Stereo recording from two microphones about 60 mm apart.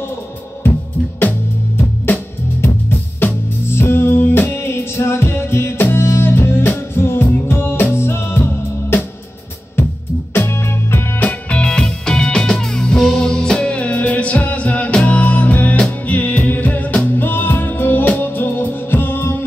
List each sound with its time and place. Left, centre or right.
2.6 s music: left
10.3 s music: left
11.1 s music: left